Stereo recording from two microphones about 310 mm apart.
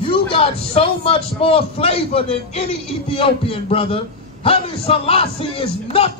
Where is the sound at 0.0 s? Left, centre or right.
Centre.